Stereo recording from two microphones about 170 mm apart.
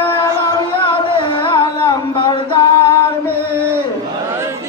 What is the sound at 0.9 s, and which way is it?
Music, 30° left (ahead or behind).